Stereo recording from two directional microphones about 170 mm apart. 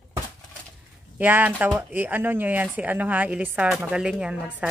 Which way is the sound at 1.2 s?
10° right (ahead or behind).